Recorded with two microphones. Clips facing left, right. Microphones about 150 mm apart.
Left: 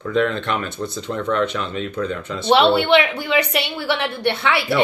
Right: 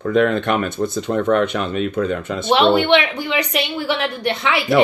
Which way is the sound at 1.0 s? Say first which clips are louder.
Right 4 dB; 55° right (ahead or behind).